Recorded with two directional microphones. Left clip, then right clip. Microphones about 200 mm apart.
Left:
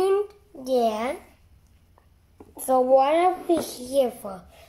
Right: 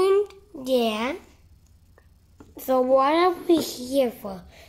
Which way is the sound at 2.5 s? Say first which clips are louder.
Left 1 dB; 15° right (ahead or behind).